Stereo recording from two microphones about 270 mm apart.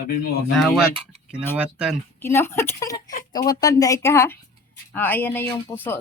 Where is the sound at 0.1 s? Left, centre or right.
Left.